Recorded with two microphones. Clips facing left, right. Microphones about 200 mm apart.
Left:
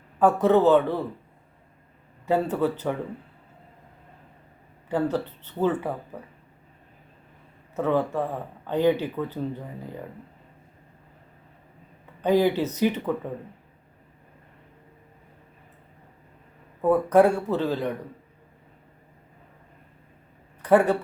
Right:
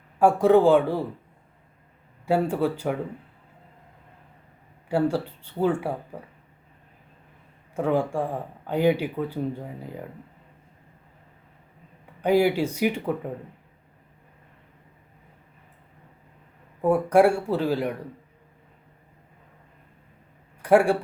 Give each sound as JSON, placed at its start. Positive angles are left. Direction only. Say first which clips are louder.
{"t": 0.2, "sound": "speech", "louder": "right 2 dB", "side_deg": -10}
{"t": 2.2, "sound": "speech", "louder": "even", "side_deg": -10}
{"t": 4.9, "sound": "speech", "louder": "right 2 dB", "side_deg": -10}
{"t": 7.8, "sound": "speech", "louder": "even", "side_deg": -10}
{"t": 12.2, "sound": "speech", "louder": "even", "side_deg": -10}
{"t": 16.8, "sound": "speech", "louder": "even", "side_deg": -10}
{"t": 20.6, "sound": "a sound", "louder": "right 1 dB", "side_deg": -10}